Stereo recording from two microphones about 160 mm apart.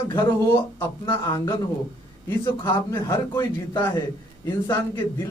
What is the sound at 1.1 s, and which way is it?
A man's voice, 25° left (ahead or behind).